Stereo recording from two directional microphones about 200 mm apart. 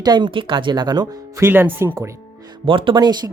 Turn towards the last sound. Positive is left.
turn(degrees=-20)  # may be behind; listen again after turning